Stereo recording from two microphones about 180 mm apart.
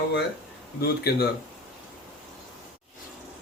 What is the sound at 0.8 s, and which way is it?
Speech, 60° left (ahead or behind).